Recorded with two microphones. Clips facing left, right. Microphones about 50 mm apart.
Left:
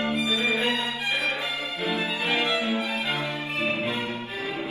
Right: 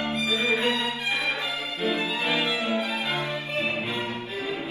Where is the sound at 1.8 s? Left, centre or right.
Left.